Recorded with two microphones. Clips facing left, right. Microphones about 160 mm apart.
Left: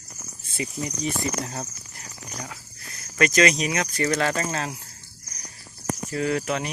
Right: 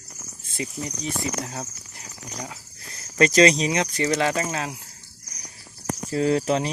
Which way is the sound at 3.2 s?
30° right (ahead or behind).